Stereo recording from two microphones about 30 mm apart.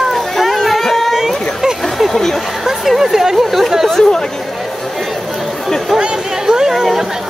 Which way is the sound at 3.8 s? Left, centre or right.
Centre.